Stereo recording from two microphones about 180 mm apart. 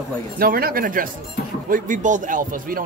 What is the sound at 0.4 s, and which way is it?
Speech, 55° right (ahead or behind).